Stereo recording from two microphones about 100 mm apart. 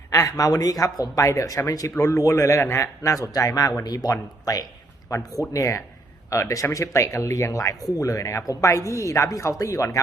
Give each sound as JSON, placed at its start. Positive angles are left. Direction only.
{"t": 0.1, "sound": "speech", "side_deg": 35}